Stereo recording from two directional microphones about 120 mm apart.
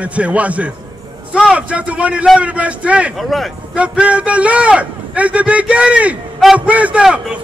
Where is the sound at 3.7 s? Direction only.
10° right (ahead or behind).